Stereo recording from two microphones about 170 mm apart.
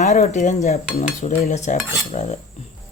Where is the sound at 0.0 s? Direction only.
40° left (ahead or behind).